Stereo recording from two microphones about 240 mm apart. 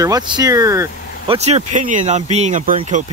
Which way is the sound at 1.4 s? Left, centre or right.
Right.